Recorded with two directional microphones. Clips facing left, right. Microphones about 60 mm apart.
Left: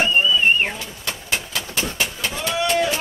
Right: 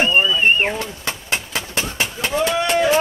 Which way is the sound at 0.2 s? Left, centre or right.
Right.